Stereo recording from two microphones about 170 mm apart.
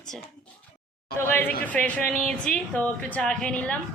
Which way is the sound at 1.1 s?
15° left (ahead or behind).